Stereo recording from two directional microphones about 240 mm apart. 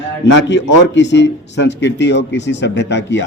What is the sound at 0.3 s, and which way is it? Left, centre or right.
Speech, left.